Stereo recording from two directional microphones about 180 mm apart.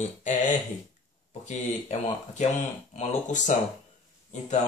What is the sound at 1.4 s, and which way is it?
Speech, 40° left (ahead or behind).